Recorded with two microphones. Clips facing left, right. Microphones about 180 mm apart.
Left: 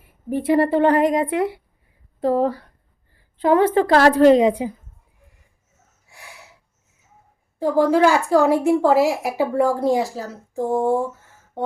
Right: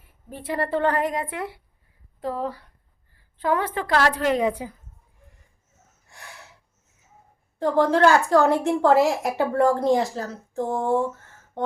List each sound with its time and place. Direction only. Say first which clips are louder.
0.3 s a woman's voice: left 9 dB; 15° left (ahead or behind)
2.2 s a woman's voice: left 9 dB; 40° left (ahead or behind)
3.3 s a woman's voice: left 8 dB; 20° left (ahead or behind)
3.8 s a woman's voice: left 9 dB; 30° left (ahead or behind)
4.4 s a woman's voice: left 7 dB; 20° left (ahead or behind)
6.1 s a sound: left 1 dB; 10° left (ahead or behind)
7.6 s a woman's voice: left 2 dB; 5° left (ahead or behind)